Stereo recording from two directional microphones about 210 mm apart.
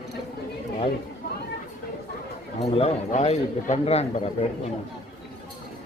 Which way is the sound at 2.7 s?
30° left (ahead or behind).